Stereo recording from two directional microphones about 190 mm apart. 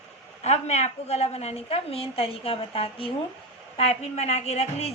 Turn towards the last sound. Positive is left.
turn(degrees=35)  # may be behind; listen again after turning